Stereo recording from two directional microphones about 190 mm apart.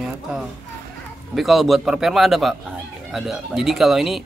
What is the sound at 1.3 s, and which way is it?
A man's voice, centre (ahead or behind).